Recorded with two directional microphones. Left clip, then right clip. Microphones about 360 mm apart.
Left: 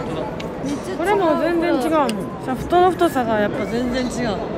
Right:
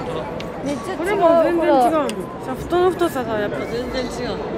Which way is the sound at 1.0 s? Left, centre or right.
Centre.